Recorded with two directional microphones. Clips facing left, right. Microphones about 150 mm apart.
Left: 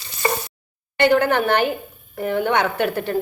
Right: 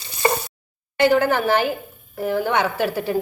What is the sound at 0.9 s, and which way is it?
A woman's voice, 5° right (ahead or behind).